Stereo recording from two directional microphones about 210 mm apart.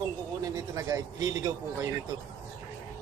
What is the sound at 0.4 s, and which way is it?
A man's voice, 15° right (ahead or behind).